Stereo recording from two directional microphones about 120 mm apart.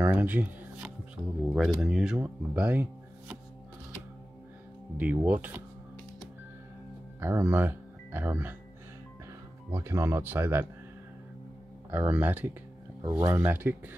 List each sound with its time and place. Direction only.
0.0 s speech: 15° right (ahead or behind)
4.9 s speech: 15° right (ahead or behind)
7.2 s speech: 20° right (ahead or behind)
9.7 s speech: 20° right (ahead or behind)
11.9 s speech: 15° right (ahead or behind)